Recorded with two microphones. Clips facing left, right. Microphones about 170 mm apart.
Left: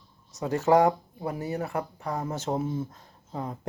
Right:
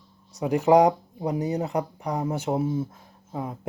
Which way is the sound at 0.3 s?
15° right (ahead or behind).